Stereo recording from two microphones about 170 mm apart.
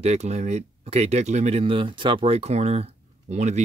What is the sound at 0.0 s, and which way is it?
Speech, 40° right (ahead or behind).